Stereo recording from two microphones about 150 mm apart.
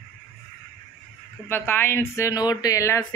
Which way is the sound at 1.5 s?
15° left (ahead or behind).